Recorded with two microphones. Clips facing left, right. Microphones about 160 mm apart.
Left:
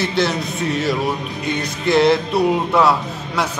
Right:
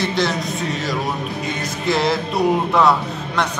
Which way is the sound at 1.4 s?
Centre (ahead or behind).